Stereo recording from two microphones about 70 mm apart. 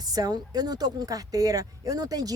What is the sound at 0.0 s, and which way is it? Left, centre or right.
A woman's voice, right.